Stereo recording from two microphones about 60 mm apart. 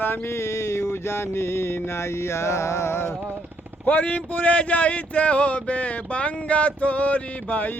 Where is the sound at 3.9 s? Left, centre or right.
Left.